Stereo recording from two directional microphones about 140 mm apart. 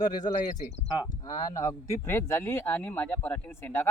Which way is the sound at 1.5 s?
25° left (ahead or behind).